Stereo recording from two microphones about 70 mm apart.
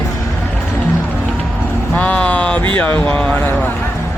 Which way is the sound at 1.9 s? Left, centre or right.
Centre.